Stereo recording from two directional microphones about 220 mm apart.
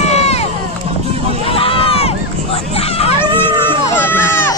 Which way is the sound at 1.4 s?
25° left (ahead or behind).